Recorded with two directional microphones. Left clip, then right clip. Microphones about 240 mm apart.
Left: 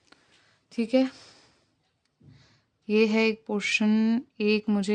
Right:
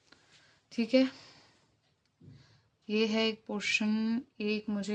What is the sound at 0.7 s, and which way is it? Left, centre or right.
Speech, centre.